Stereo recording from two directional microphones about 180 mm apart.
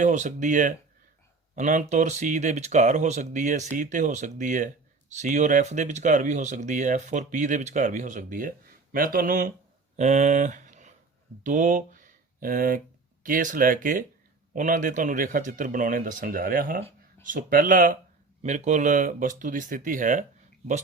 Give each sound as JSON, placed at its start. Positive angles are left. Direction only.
{"t": 0.0, "sound": "speech", "side_deg": -40}
{"t": 10.0, "sound": "speech", "side_deg": -40}